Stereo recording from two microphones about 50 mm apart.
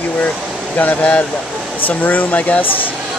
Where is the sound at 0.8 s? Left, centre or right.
Left.